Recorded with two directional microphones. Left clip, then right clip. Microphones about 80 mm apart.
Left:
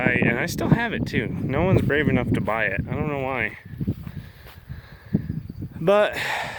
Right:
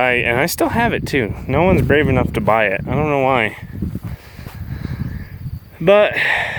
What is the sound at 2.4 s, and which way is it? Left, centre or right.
Speech, centre.